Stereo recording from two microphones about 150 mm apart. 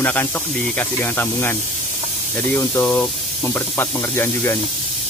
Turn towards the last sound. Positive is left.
turn(degrees=15)  # may be behind; listen again after turning